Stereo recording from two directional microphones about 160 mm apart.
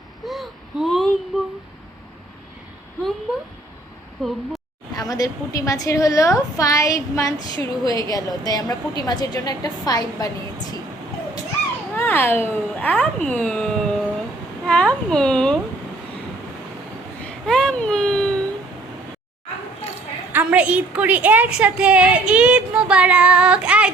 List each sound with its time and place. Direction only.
0.3 s a sound: centre (ahead or behind)
4.2 s speech: centre (ahead or behind)
4.9 s a woman's voice: 25° left (ahead or behind)
11.9 s speech: 15° left (ahead or behind)
13.2 s a sound: 5° left (ahead or behind)
14.7 s speech: 5° left (ahead or behind)
17.2 s baby cry: 5° left (ahead or behind)
20.3 s a woman's voice: 10° right (ahead or behind)